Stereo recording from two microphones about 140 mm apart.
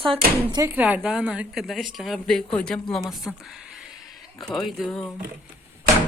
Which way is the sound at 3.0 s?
Centre (ahead or behind).